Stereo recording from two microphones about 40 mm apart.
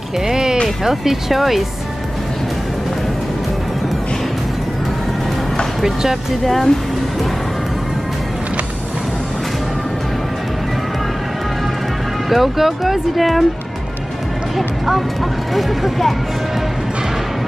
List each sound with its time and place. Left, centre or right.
0.3 s music: centre
0.8 s speech: centre
5.8 s speech: centre
12.3 s speech: centre
15.5 s speech: centre